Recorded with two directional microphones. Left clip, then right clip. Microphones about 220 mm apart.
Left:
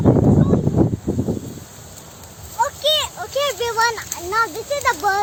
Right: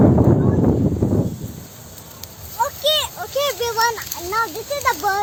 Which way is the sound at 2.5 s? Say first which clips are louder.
Left 1 dB; centre (ahead or behind).